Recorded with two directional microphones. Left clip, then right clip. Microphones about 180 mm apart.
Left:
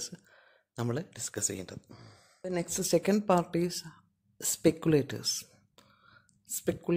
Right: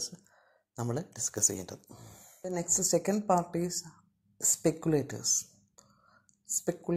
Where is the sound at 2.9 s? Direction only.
40° left (ahead or behind).